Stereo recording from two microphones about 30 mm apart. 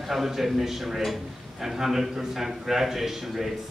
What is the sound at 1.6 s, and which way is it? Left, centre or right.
A man's voice, centre.